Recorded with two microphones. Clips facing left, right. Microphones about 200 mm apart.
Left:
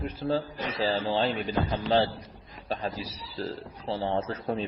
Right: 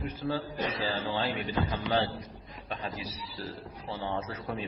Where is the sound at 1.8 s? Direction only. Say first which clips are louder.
Left 4 dB; 35° left (ahead or behind).